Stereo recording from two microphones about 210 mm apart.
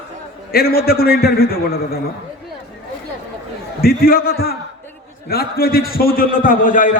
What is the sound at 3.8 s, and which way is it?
A man's voice, 45° left (ahead or behind).